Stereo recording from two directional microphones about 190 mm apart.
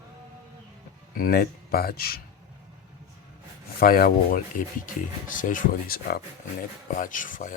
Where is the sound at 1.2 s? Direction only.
50° left (ahead or behind).